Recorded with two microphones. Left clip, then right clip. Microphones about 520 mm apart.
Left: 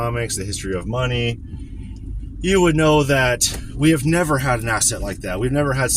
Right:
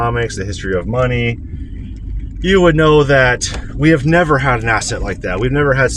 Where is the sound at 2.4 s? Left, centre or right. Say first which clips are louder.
Right 5 dB; left.